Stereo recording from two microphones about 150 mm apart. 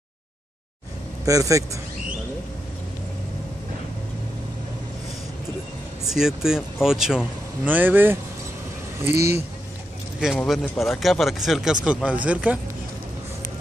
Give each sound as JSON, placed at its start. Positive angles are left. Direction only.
{"t": 1.2, "sound": "speech", "side_deg": -20}
{"t": 6.0, "sound": "speech", "side_deg": -5}
{"t": 10.2, "sound": "speech", "side_deg": 0}